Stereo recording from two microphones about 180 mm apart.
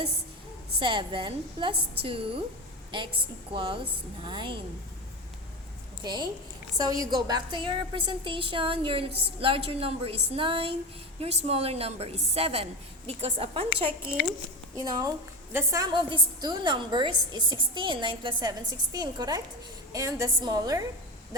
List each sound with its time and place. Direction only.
0.8 s a woman's voice: 25° right (ahead or behind)
3.5 s a woman's voice: 30° right (ahead or behind)
6.0 s a woman's voice: 25° right (ahead or behind)
14.8 s a woman's voice: 20° right (ahead or behind)